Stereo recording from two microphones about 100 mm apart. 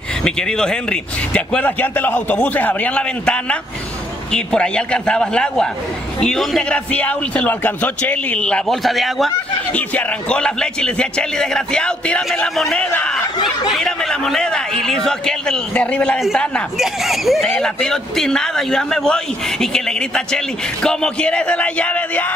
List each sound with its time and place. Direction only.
0.2 s a man's voice: 5° left (ahead or behind)
6.7 s a man's voice: 15° left (ahead or behind)
9.8 s a man's voice: 15° left (ahead or behind)
16.7 s a man's voice: centre (ahead or behind); by 22.3 s 15° left (ahead or behind)